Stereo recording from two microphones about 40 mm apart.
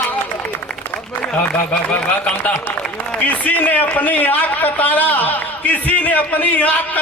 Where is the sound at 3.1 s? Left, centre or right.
Left.